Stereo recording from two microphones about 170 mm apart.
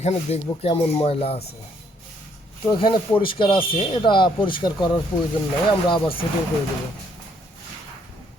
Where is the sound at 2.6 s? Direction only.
30° left (ahead or behind).